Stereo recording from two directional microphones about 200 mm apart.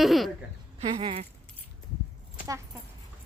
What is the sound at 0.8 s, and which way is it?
Speech, 25° right (ahead or behind).